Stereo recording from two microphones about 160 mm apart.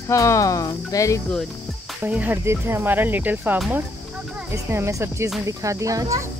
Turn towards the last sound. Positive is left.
turn(degrees=-20)  # may be behind; listen again after turning